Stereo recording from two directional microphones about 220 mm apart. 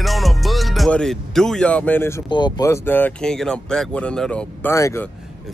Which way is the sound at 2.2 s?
20° left (ahead or behind).